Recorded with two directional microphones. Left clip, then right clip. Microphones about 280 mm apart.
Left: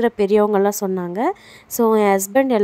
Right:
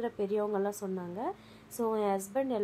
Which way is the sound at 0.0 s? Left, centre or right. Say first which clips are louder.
Left 16 dB; left.